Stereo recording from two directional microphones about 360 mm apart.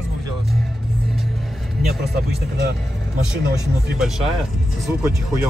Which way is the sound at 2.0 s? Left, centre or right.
Right.